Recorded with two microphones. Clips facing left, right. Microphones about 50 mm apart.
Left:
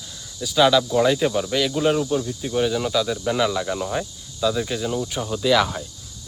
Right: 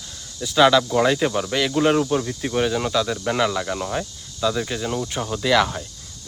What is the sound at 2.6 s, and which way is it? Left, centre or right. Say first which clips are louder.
Speech: even; centre.